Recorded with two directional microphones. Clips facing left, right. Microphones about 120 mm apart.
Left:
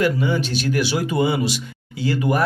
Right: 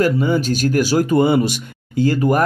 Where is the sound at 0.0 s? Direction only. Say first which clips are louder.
Right 3 dB; 45° right (ahead or behind).